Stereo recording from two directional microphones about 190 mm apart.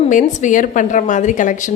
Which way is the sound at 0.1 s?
40° left (ahead or behind).